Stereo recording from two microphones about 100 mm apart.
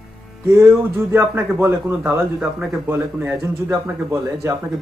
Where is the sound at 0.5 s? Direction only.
25° right (ahead or behind).